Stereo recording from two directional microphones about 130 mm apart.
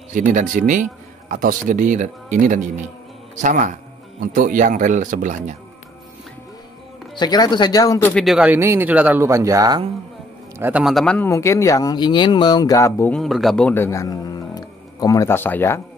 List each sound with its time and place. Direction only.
0.1 s speech: 85° right
1.3 s speech: 90° right
3.3 s a man's voice: 75° right (ahead or behind)
4.2 s speech: 90° right
7.2 s speech: 30° left (ahead or behind)
8.1 s a man's voice: centre (ahead or behind)
8.5 s speech: 15° right (ahead or behind)
10.6 s a man's voice: 10° right (ahead or behind)
11.2 s speech: 25° left (ahead or behind)
13.1 s a man's voice: centre (ahead or behind)
13.7 s speech: 20° left (ahead or behind)